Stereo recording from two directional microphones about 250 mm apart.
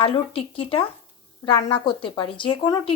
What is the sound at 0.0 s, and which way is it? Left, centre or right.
A woman's voice, left.